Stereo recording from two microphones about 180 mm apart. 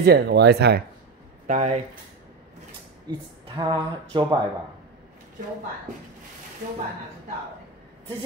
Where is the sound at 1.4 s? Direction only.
40° right (ahead or behind).